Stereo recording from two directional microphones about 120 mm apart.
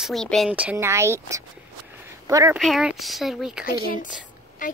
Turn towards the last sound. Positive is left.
turn(degrees=90)